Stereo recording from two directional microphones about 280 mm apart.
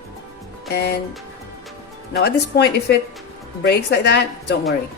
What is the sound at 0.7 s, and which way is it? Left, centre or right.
Speech, left.